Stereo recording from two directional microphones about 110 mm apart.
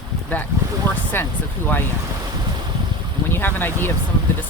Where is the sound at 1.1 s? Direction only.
20° left (ahead or behind).